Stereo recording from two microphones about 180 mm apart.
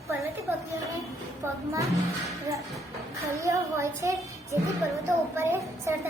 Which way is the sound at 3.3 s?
15° right (ahead or behind).